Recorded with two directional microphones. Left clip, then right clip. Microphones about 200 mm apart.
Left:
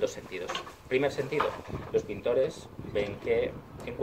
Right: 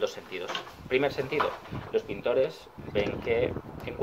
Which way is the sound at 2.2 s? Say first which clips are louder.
Right 2 dB; centre (ahead or behind).